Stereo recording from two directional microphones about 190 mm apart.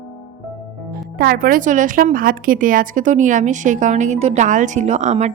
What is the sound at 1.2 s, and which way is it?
Speech, 50° right (ahead or behind).